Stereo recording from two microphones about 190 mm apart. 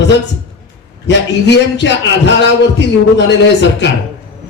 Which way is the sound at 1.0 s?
65° left (ahead or behind).